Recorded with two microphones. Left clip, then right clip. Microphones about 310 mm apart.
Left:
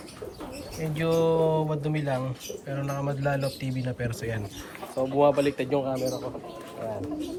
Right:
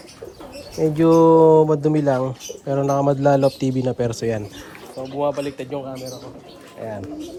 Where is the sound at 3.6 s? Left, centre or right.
Centre.